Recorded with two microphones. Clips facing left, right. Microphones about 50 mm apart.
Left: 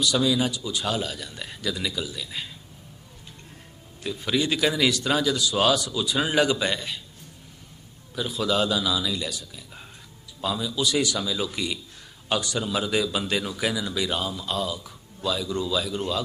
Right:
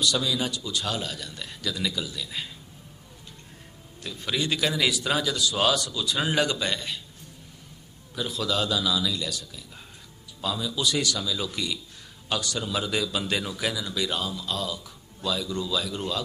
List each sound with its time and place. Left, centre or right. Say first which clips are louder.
0.0 s speech: left 3 dB; centre
4.0 s speech: left 4 dB; centre
8.1 s speech: left 3 dB; centre
10.8 s speech: left 2 dB; centre
11.0 s speech: left 2 dB; centre